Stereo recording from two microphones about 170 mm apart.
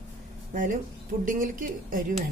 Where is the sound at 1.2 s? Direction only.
50° right (ahead or behind).